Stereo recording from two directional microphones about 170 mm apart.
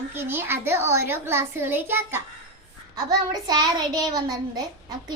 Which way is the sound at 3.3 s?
25° right (ahead or behind).